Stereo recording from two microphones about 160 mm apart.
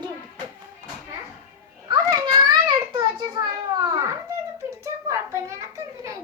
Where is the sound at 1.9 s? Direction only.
25° right (ahead or behind).